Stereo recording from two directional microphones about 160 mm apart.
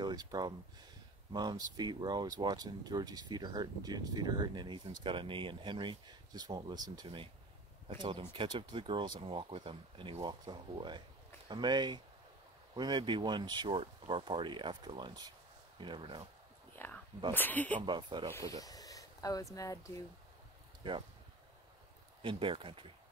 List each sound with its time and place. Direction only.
0.0 s speech: 25° right (ahead or behind)
16.7 s a sound: 15° left (ahead or behind)
17.3 s speech: 10° left (ahead or behind)
17.8 s speech: 30° right (ahead or behind)
18.3 s speech: 20° left (ahead or behind)
20.8 s speech: 30° right (ahead or behind)
22.2 s speech: 30° right (ahead or behind)